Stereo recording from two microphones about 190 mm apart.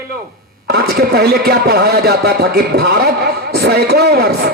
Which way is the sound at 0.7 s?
55° right (ahead or behind).